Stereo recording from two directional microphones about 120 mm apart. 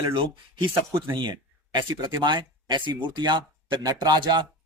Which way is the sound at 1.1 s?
40° right (ahead or behind).